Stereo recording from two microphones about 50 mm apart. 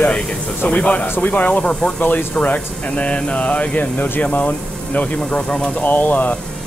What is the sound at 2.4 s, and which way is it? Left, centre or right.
Speech, left.